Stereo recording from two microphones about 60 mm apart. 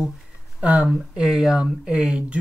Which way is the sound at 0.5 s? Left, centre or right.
Right.